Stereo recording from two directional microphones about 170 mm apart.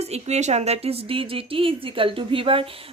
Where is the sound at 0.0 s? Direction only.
40° right (ahead or behind).